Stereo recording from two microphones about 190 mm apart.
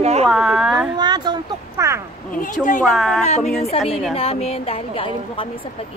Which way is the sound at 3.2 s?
35° left (ahead or behind).